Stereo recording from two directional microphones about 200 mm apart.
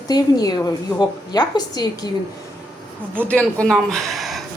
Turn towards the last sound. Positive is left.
turn(degrees=0)  # may be behind; listen again after turning